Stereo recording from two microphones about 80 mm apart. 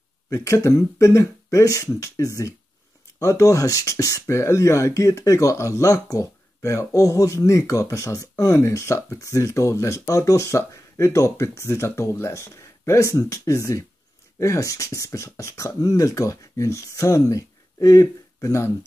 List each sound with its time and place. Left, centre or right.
0.3 s speech: left